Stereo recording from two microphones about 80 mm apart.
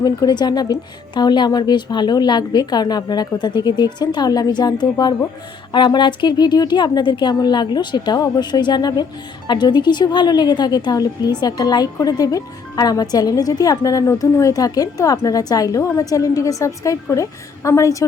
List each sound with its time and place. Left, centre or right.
0.0 s a woman's voice: left
5.7 s a woman's voice: left